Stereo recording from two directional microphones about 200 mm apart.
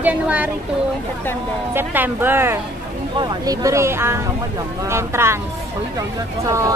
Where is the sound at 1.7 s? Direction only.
10° right (ahead or behind).